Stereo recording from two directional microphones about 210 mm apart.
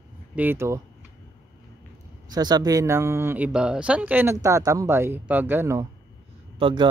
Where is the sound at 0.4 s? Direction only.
10° right (ahead or behind).